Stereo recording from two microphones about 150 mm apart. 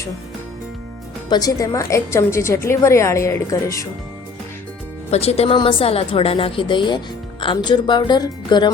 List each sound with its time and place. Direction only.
1.3 s a woman's voice: 25° left (ahead or behind)
5.1 s a woman's voice: 45° left (ahead or behind)